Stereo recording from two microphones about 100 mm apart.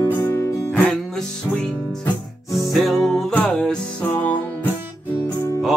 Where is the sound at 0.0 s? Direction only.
30° left (ahead or behind).